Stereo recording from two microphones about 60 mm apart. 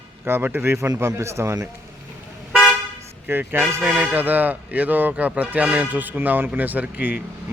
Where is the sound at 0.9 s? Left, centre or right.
Right.